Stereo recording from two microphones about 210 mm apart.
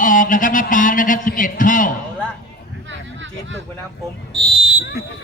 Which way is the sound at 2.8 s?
60° right (ahead or behind).